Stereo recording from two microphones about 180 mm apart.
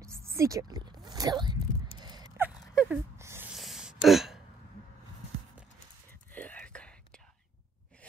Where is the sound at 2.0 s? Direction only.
20° right (ahead or behind).